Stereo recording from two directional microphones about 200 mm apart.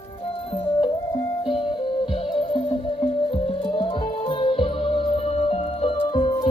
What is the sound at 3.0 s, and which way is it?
Music, 25° left (ahead or behind).